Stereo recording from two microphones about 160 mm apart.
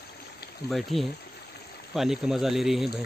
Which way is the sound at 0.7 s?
Centre (ahead or behind).